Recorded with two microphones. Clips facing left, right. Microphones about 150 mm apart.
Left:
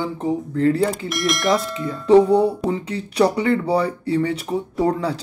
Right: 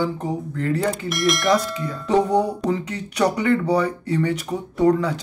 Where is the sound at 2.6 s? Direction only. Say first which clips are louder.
Even; 30° left (ahead or behind).